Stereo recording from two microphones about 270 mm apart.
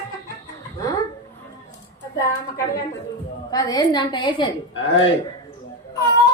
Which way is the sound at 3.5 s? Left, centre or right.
Centre.